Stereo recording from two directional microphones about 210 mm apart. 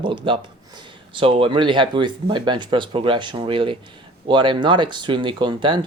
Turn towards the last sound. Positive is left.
turn(degrees=-20)  # may be behind; listen again after turning